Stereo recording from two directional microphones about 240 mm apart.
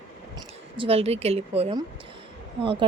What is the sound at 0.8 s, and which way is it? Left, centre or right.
Speech, right.